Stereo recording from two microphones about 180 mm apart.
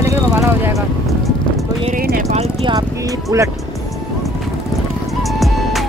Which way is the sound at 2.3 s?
35° right (ahead or behind).